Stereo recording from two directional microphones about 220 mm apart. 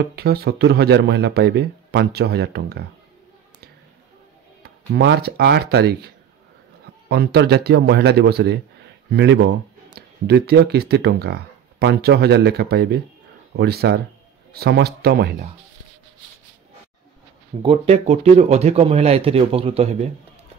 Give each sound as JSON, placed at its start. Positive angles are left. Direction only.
{"t": 0.0, "sound": "speech", "side_deg": -45}
{"t": 4.6, "sound": "speech", "side_deg": -50}
{"t": 17.6, "sound": "speech", "side_deg": -25}